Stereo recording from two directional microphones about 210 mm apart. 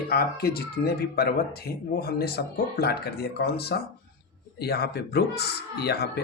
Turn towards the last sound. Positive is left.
turn(degrees=50)  # may be behind; listen again after turning